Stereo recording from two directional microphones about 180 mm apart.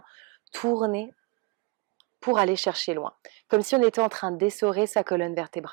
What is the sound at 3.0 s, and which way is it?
Speech, 25° right (ahead or behind).